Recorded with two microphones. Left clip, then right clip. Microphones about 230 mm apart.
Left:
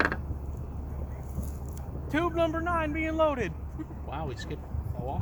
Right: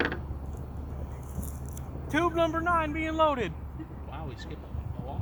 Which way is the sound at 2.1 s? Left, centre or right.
Right.